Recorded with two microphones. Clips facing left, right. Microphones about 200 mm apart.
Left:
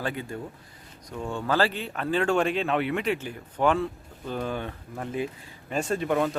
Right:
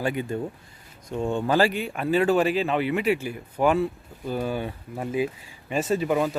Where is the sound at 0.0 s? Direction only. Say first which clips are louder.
Right 5 dB; 15° right (ahead or behind).